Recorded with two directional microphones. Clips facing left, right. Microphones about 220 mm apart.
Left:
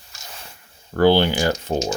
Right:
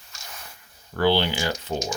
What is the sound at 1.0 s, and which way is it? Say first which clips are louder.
Speech: left 6 dB; 50° left (ahead or behind).